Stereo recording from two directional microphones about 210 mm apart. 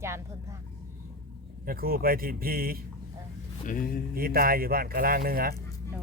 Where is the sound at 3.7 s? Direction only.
40° left (ahead or behind).